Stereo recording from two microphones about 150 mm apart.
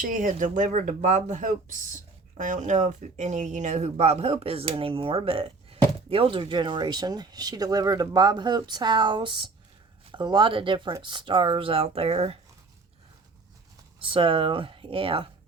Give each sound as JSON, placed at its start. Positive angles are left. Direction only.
{"t": 0.0, "sound": "speech", "side_deg": -60}
{"t": 14.0, "sound": "speech", "side_deg": -35}